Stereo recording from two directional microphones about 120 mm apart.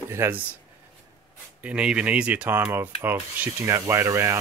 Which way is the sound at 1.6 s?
10° right (ahead or behind).